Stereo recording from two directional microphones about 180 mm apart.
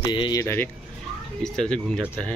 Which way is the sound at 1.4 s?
5° left (ahead or behind).